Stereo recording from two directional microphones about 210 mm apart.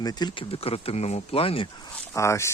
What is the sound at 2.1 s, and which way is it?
Speech, 15° left (ahead or behind).